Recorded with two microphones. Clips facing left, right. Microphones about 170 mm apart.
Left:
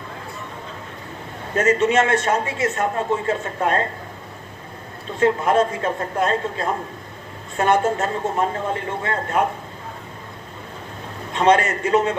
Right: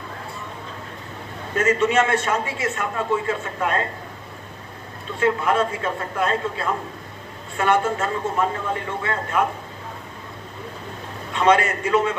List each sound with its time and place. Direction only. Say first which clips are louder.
1.5 s a man's voice: left 2 dB; 40° left (ahead or behind)
5.2 s a man's voice: left 3 dB; 40° left (ahead or behind)
11.3 s a man's voice: left 1 dB; 40° left (ahead or behind)